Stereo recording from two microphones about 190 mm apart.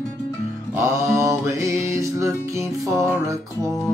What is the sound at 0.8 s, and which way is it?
Music, 15° right (ahead or behind).